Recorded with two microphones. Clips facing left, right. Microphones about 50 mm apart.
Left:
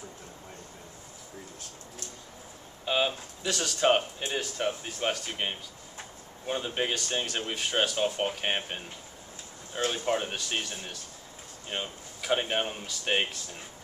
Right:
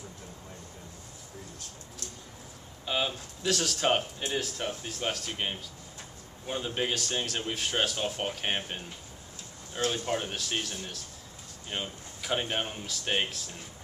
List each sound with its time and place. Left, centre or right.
2.8 s a sound: centre
3.4 s speech: centre
10.3 s speech: centre